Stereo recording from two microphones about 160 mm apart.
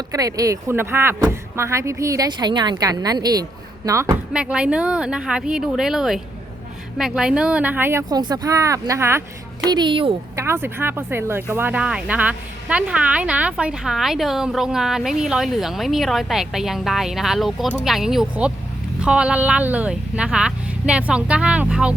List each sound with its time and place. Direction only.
0.1 s speech: 20° right (ahead or behind)
4.3 s speech: 5° right (ahead or behind)
9.6 s speech: 30° right (ahead or behind)
10.3 s speech: 15° right (ahead or behind)